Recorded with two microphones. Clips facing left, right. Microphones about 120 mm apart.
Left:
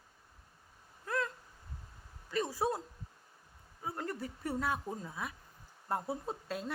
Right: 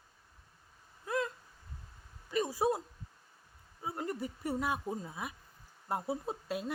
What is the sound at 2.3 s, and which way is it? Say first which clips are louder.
Speech: right 2 dB; 15° right (ahead or behind).